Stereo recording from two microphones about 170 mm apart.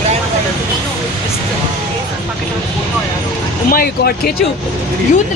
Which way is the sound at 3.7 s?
65° left (ahead or behind).